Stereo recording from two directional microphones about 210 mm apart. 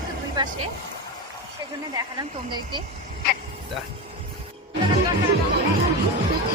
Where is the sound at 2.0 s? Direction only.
20° right (ahead or behind).